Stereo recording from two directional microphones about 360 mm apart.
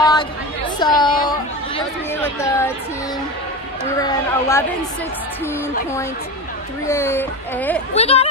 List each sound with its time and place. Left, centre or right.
0.0 s chatter: centre
0.7 s speech: centre
4.0 s speech: centre
6.9 s speech: centre
7.9 s speech: centre